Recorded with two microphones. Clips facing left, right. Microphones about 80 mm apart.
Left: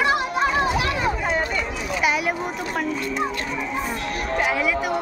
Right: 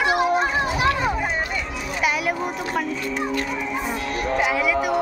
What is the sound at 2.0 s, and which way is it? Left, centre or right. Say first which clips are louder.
Speech: even; centre.